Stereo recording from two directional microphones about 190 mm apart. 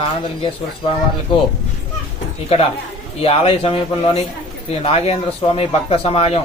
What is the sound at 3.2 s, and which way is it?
A man's voice, 30° left (ahead or behind).